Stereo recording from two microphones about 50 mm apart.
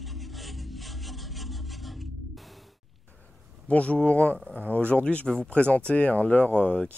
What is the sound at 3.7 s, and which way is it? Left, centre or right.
Speech, left.